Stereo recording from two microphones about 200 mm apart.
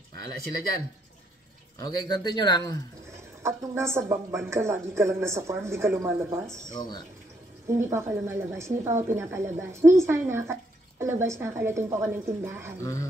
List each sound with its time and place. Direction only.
1.8 s speech: 20° left (ahead or behind)
3.4 s a woman's voice: 15° right (ahead or behind)
6.7 s speech: 20° left (ahead or behind)
7.6 s a woman's voice: 15° right (ahead or behind)